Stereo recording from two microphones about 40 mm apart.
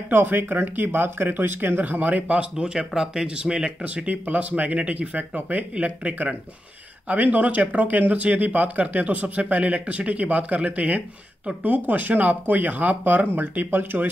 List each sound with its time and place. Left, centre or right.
0.1 s speech: right
2.5 s speech: right
3.3 s speech: right
3.8 s speech: right